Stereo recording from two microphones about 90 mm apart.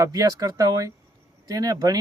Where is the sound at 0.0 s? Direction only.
45° right (ahead or behind).